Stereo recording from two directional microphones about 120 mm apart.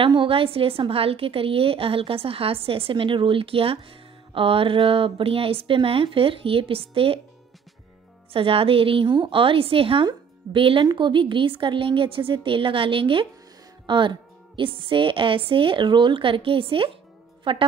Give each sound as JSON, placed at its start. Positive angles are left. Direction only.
{"t": 0.0, "sound": "a woman's voice", "side_deg": -45}
{"t": 8.3, "sound": "a woman's voice", "side_deg": -50}